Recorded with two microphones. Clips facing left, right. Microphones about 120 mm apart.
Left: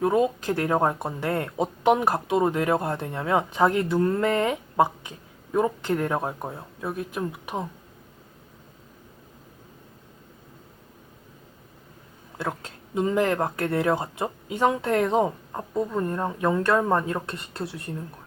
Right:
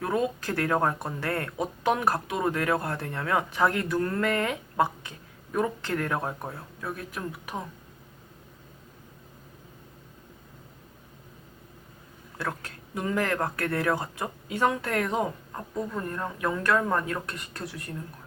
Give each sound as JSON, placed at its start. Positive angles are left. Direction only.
{"t": 0.0, "sound": "speech", "side_deg": 20}
{"t": 12.4, "sound": "speech", "side_deg": 20}